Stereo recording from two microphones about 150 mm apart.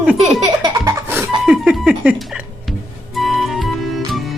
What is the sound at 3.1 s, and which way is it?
Music, centre (ahead or behind).